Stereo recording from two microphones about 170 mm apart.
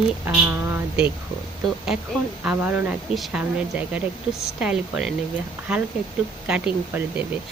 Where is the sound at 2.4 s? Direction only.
5° right (ahead or behind).